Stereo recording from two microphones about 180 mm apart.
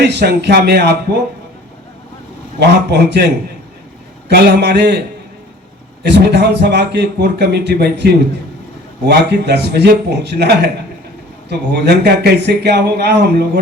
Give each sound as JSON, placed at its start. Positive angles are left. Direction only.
{"t": 0.0, "sound": "a man's voice", "side_deg": -70}
{"t": 2.6, "sound": "a man's voice", "side_deg": -70}